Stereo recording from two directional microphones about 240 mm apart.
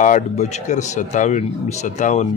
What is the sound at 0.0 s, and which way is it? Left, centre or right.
Speech, left.